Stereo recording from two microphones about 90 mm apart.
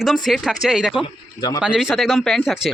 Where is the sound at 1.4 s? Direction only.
50° left (ahead or behind).